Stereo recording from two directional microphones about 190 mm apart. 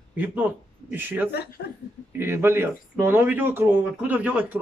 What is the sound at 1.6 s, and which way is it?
Speech, 55° left (ahead or behind).